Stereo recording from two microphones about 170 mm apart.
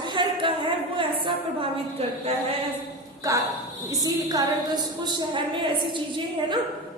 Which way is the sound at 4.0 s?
20° right (ahead or behind).